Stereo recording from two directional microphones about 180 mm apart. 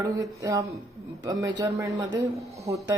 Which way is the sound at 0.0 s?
20° right (ahead or behind).